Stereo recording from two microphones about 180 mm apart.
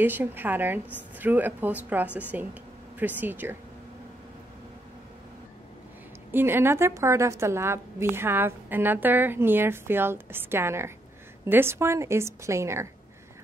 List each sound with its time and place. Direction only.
0.0 s a woman's voice: 10° right (ahead or behind)
6.3 s a woman's voice: 10° right (ahead or behind)